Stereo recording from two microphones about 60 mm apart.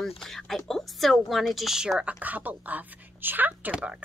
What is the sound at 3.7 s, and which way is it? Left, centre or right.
Speech, centre.